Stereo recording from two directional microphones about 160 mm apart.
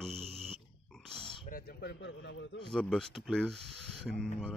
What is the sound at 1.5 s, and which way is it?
A man's voice, 70° left (ahead or behind).